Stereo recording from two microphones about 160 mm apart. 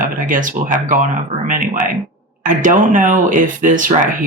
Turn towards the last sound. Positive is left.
turn(degrees=-55)  # may be behind; listen again after turning